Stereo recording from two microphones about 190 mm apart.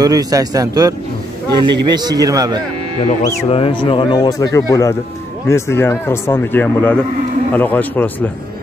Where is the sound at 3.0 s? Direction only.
30° left (ahead or behind); by 8.3 s 10° left (ahead or behind).